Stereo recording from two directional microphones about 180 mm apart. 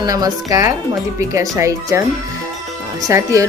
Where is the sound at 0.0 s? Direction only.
20° right (ahead or behind).